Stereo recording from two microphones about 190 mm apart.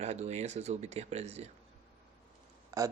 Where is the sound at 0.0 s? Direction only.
35° right (ahead or behind).